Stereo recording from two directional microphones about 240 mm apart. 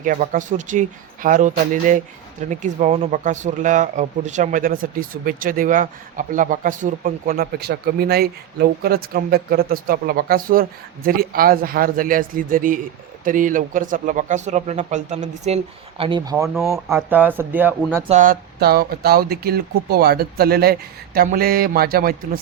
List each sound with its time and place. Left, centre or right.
0.0 s speech: right; by 17.7 s centre
18.1 s speech: right